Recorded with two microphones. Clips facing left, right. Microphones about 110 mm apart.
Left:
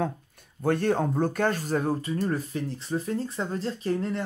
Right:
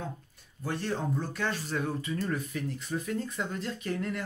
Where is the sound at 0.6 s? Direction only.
50° left (ahead or behind).